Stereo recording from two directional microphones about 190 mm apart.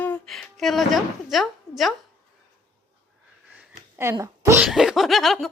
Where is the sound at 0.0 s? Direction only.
5° left (ahead or behind).